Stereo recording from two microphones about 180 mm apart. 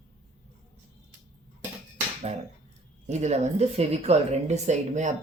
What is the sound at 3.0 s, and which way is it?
A woman's voice, 40° right (ahead or behind).